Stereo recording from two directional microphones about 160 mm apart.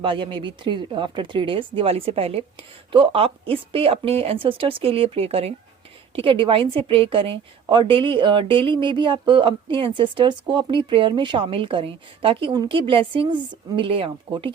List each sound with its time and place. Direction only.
0.0 s a woman's voice: 30° right (ahead or behind)